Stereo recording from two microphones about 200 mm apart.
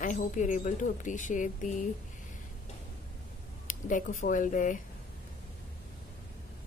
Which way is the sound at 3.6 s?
40° left (ahead or behind).